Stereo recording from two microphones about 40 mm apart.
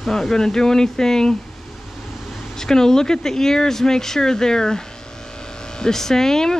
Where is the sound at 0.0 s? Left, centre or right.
Centre.